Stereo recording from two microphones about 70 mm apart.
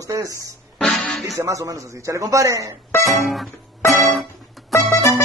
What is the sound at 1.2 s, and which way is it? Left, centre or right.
A man's voice, right.